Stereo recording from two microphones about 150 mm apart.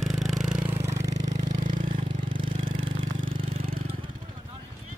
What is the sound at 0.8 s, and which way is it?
Vehicle, 50° right (ahead or behind).